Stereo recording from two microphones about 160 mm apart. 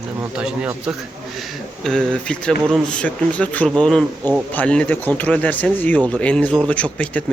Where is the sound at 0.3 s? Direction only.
5° right (ahead or behind).